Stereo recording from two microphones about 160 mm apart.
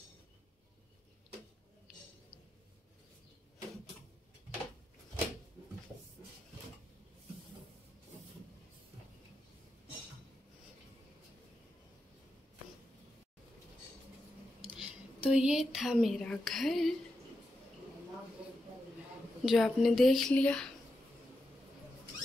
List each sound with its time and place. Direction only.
14.6 s a woman's voice: 5° right (ahead or behind)
19.4 s a woman's voice: centre (ahead or behind)